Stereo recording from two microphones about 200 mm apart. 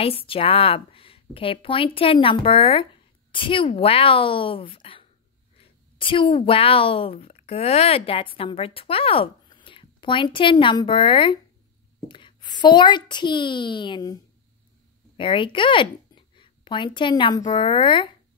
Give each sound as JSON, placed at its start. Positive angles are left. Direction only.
{"t": 0.0, "sound": "a woman's voice", "side_deg": 30}